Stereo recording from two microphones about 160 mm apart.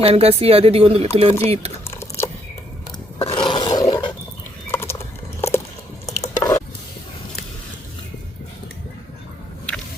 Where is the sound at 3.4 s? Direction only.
25° left (ahead or behind).